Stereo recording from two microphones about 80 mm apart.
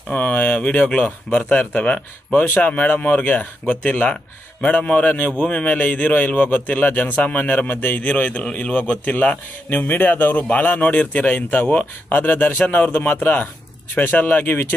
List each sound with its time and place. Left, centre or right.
0.1 s a man's voice: centre